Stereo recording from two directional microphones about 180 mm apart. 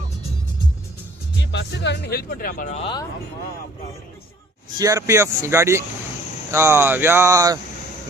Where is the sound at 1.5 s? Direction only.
75° left (ahead or behind); by 2.9 s 40° left (ahead or behind).